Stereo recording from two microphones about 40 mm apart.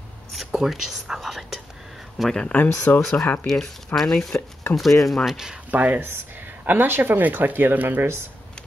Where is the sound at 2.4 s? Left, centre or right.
Left.